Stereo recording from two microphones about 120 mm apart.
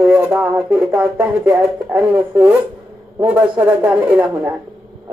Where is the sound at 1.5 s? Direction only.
15° right (ahead or behind).